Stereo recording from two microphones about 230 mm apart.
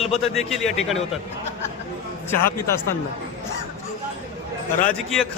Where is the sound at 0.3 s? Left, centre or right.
Centre.